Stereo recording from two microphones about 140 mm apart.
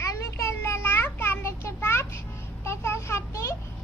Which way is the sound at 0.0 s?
20° left (ahead or behind).